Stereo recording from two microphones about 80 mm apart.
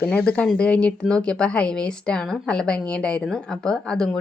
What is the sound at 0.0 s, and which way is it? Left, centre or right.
Speech, centre.